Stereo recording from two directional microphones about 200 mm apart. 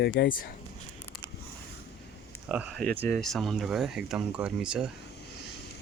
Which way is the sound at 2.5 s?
5° right (ahead or behind).